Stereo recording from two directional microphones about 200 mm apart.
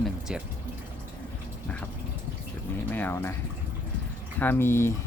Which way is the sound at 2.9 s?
10° left (ahead or behind).